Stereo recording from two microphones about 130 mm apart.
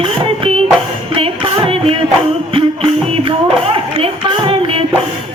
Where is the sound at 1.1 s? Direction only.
45° right (ahead or behind).